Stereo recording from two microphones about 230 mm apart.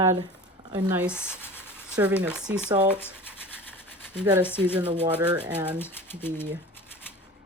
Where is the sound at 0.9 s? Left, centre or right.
Centre.